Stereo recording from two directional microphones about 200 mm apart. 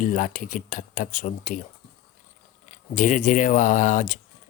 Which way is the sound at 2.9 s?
40° left (ahead or behind).